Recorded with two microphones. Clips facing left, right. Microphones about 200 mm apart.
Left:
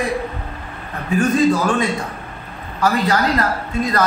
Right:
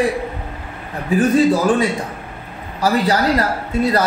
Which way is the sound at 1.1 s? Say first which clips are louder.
Right 2 dB; 35° right (ahead or behind).